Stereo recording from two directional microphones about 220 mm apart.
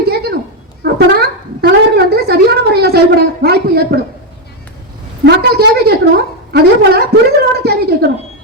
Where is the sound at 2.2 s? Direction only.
45° right (ahead or behind).